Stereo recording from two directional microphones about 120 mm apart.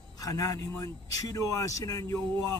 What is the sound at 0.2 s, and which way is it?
Speech, 30° left (ahead or behind).